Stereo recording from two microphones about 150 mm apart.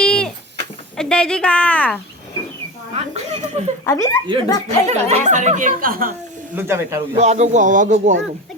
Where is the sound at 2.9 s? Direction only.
45° right (ahead or behind).